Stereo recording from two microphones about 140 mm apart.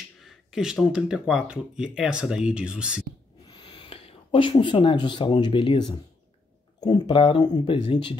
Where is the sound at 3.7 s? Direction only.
40° left (ahead or behind).